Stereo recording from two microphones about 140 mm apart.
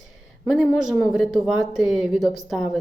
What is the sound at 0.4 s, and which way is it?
Speech, centre (ahead or behind).